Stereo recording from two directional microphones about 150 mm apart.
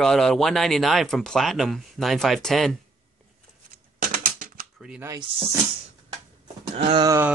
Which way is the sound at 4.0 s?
70° right (ahead or behind).